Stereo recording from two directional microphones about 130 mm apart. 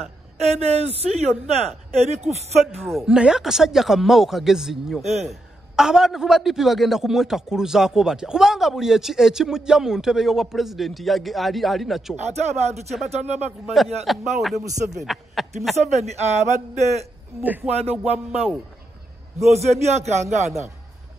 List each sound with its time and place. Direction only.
0.4 s a woman's voice: 55° right (ahead or behind)
2.8 s a man's voice: centre (ahead or behind)
5.0 s a man's voice: 55° right (ahead or behind)
5.3 s a man's voice: 5° right (ahead or behind)
12.2 s a man's voice: 60° right (ahead or behind)
14.1 s a man's voice: centre (ahead or behind)
15.7 s a man's voice: 60° right (ahead or behind)
17.4 s music: 15° right (ahead or behind)
17.6 s a woman's voice: 55° right (ahead or behind)
17.9 s music: 5° right (ahead or behind)
19.5 s a man's voice: 55° right (ahead or behind)